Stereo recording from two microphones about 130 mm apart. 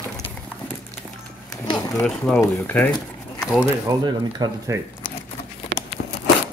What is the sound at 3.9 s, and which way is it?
Speech, 30° right (ahead or behind).